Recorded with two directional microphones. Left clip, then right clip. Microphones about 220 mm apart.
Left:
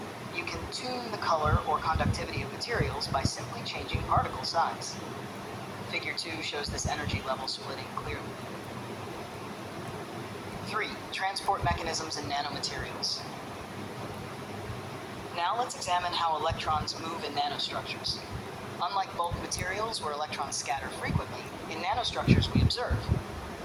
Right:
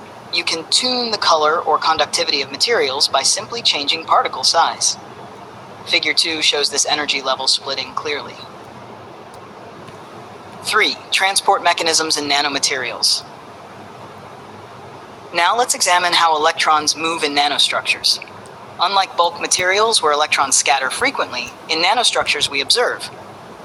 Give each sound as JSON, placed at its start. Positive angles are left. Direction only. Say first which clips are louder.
{"t": 0.3, "sound": "speech", "louder": "right 19 dB", "side_deg": -45}
{"t": 10.7, "sound": "speech", "louder": "right 19 dB", "side_deg": -45}
{"t": 15.4, "sound": "speech", "louder": "right 15 dB", "side_deg": -45}